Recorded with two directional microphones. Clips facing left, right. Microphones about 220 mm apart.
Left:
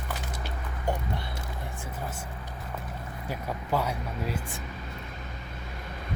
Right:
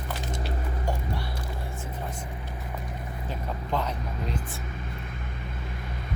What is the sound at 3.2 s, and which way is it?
Speech, 10° left (ahead or behind).